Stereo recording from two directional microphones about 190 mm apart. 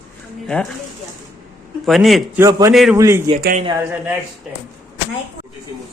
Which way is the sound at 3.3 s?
20° right (ahead or behind).